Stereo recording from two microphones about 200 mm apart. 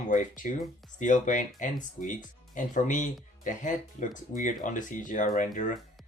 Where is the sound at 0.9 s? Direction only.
40° left (ahead or behind).